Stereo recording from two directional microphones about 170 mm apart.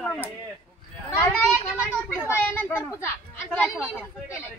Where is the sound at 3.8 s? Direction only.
10° right (ahead or behind).